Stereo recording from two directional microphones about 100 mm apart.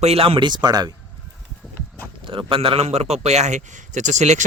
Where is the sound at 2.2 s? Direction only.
60° right (ahead or behind); by 3.4 s 90° right.